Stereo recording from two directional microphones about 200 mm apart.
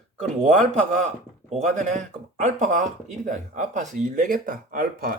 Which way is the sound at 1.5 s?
35° right (ahead or behind).